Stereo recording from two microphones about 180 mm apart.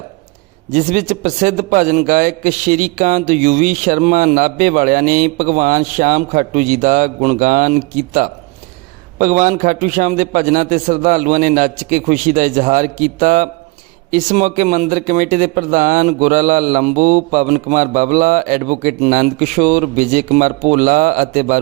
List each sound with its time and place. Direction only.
0.7 s a man's voice: 45° right (ahead or behind)